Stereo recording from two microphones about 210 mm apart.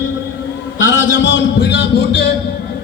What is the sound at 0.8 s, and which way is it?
A man's voice, 60° left (ahead or behind).